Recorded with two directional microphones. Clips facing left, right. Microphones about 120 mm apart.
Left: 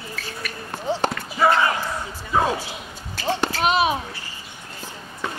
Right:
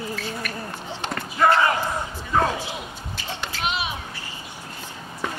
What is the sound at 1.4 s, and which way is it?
Basketball bounce, 5° left (ahead or behind).